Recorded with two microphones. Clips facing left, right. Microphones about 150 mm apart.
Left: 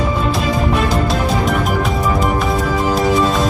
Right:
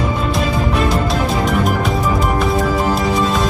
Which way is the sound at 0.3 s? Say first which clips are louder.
Left 1 dB; centre (ahead or behind).